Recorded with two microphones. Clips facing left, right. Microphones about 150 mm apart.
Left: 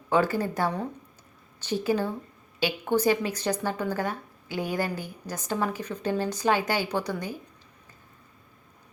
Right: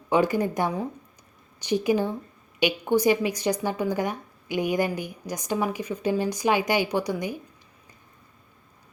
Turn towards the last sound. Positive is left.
turn(degrees=-15)  # may be behind; listen again after turning